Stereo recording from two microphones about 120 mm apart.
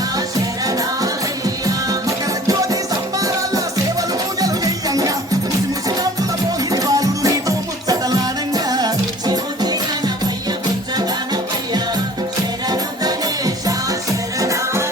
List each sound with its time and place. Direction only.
0.6 s music: 30° right (ahead or behind)
6.7 s music: 30° right (ahead or behind)
12.6 s music: 35° right (ahead or behind)